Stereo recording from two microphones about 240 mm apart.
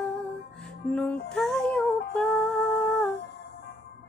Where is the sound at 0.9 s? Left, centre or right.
Centre.